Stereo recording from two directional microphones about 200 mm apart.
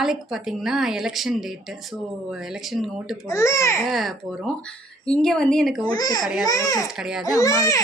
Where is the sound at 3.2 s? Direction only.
15° left (ahead or behind).